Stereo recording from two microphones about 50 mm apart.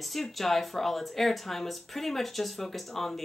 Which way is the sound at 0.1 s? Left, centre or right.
Centre.